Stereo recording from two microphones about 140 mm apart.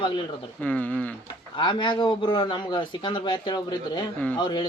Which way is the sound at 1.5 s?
35° left (ahead or behind).